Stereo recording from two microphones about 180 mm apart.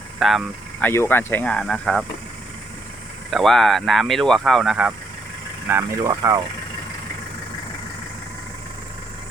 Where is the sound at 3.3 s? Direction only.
Centre (ahead or behind).